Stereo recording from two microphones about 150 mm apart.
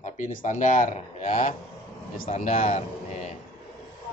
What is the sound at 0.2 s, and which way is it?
Speech, 55° left (ahead or behind).